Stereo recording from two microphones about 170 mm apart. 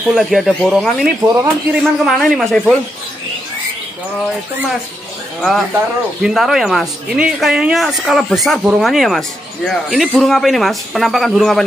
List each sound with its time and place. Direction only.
0.1 s speech: centre (ahead or behind)
1.3 s speech: 15° right (ahead or behind)
1.8 s speech: centre (ahead or behind)
5.4 s speech: centre (ahead or behind)